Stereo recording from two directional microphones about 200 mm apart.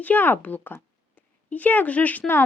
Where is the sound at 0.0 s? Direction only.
10° left (ahead or behind).